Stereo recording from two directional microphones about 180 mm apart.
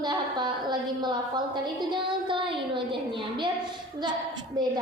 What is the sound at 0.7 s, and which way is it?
A woman's voice, 25° right (ahead or behind).